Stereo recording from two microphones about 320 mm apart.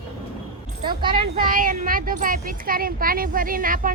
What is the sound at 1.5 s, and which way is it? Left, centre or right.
Speech, right.